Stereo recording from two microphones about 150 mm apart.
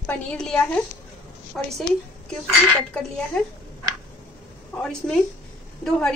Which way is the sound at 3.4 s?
5° left (ahead or behind).